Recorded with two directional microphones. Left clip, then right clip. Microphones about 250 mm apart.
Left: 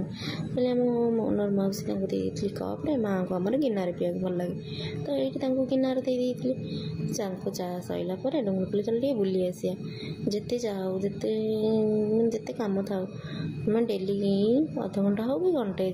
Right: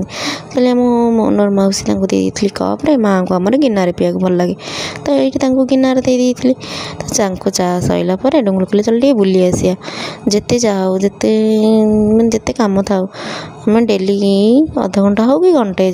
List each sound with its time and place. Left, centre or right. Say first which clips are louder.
0.2 s a woman's voice: right 15 dB; right